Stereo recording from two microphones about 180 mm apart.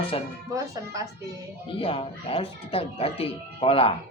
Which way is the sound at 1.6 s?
30° left (ahead or behind).